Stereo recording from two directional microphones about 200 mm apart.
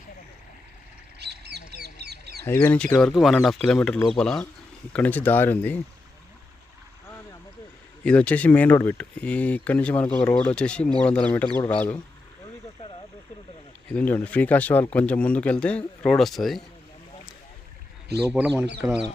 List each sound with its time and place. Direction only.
1.2 s duck: 55° right (ahead or behind)
2.4 s speech: 10° left (ahead or behind)
8.0 s speech: 5° left (ahead or behind)
13.9 s speech: 10° left (ahead or behind)
18.8 s speech: 5° right (ahead or behind)